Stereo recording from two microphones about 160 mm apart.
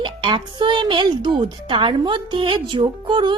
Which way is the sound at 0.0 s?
30° right (ahead or behind).